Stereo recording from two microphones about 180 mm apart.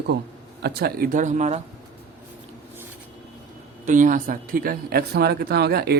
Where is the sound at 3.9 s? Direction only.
45° right (ahead or behind).